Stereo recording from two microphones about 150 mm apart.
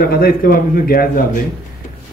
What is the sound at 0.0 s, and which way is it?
A man's voice, 80° left.